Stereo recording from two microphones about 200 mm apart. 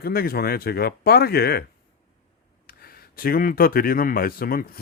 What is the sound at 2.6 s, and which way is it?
Speech, 50° left (ahead or behind).